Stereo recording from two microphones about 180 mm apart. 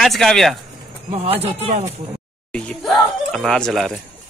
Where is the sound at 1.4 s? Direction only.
35° right (ahead or behind).